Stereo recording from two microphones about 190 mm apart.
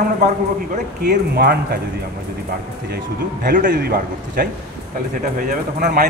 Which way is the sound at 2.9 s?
50° right (ahead or behind).